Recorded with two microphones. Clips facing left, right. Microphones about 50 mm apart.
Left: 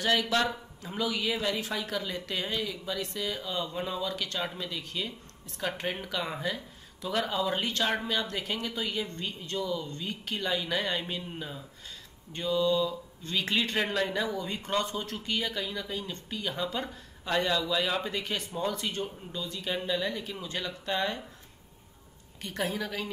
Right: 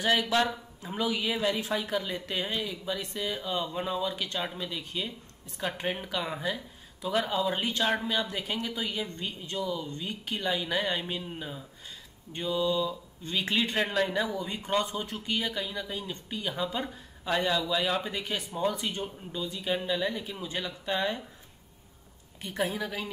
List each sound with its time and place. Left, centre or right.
0.0 s speech: centre
4.4 s speech: centre
7.8 s speech: centre
8.1 s speech: centre
13.7 s speech: centre
18.2 s speech: centre
22.4 s speech: centre